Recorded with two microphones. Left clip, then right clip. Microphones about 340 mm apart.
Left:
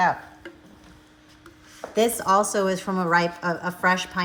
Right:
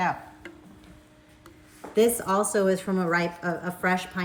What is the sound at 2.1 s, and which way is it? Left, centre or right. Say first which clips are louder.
A woman's voice: left 4 dB; centre.